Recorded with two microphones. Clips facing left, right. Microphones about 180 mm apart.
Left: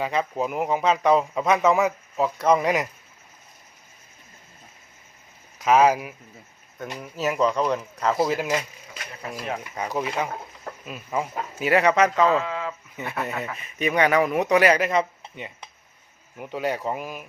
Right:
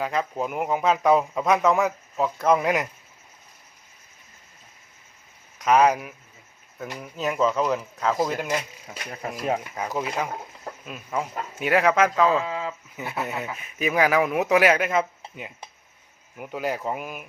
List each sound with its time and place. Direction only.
0.0 s speech: centre (ahead or behind)
5.5 s speech: centre (ahead or behind)
9.7 s speech: centre (ahead or behind)
12.5 s speech: 20° right (ahead or behind)
13.0 s speech: centre (ahead or behind)